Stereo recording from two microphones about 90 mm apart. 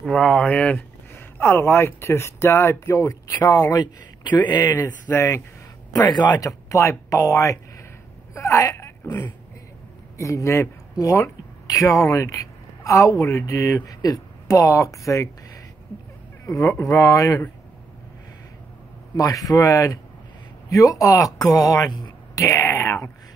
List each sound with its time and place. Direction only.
0.0 s speech: 10° left (ahead or behind)
0.7 s speech: 25° left (ahead or behind); by 4.7 s 50° left (ahead or behind)
5.1 s speech: 30° left (ahead or behind)
6.4 s speech: 35° left (ahead or behind)
8.4 s a sound: 35° left (ahead or behind)
10.1 s a woman's voice: 35° left (ahead or behind)
16.4 s speech: 40° left (ahead or behind)
19.1 s speech: 40° left (ahead or behind)